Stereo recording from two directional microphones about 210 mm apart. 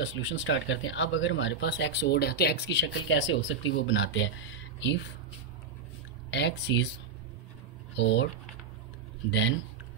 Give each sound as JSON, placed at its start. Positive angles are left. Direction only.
{"t": 0.0, "sound": "speech", "side_deg": 65}
{"t": 6.3, "sound": "speech", "side_deg": 55}
{"t": 7.9, "sound": "speech", "side_deg": 55}